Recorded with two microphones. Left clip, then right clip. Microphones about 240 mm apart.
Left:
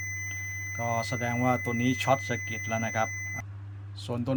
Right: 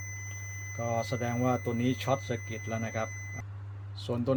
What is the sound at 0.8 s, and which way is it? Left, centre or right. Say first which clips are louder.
A man's voice: left 1 dB; centre.